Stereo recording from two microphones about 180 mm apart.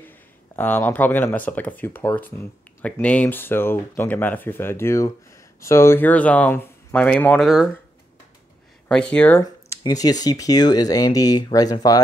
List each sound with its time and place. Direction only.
0.6 s speech: 10° left (ahead or behind)
8.8 s speech: 5° left (ahead or behind)
9.4 s a sound: 20° left (ahead or behind)
10.2 s speech: 20° left (ahead or behind)